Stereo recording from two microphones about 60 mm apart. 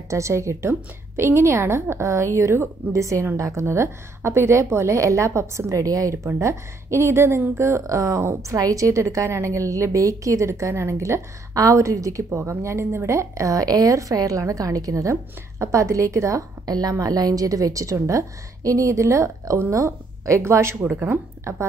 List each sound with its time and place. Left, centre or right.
0.1 s a woman's voice: right
2.0 s a woman's voice: right
7.8 s a woman's voice: right
17.0 s a woman's voice: right